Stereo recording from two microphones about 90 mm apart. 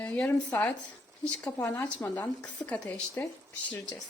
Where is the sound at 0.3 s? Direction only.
10° left (ahead or behind).